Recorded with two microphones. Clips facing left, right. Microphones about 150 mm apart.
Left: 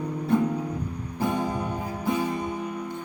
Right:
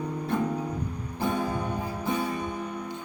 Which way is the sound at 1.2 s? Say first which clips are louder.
Left 1 dB; 15° left (ahead or behind).